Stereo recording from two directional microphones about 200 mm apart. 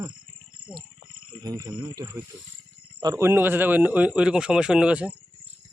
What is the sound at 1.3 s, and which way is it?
Speech, 20° right (ahead or behind).